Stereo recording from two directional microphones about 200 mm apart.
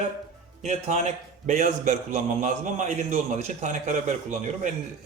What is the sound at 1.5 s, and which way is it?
A man's voice, 40° right (ahead or behind).